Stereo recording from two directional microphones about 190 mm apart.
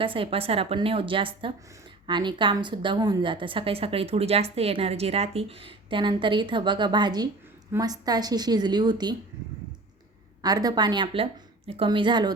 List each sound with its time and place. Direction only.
0.0 s a woman's voice: 25° right (ahead or behind)
10.4 s a woman's voice: 20° right (ahead or behind)